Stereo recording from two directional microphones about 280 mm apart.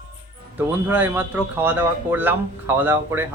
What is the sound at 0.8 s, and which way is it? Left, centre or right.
Speech, centre.